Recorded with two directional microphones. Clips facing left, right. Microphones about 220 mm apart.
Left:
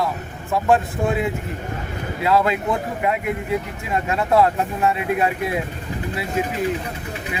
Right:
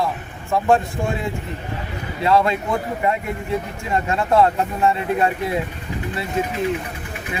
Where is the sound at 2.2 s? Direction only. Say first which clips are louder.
Right 1 dB; centre (ahead or behind).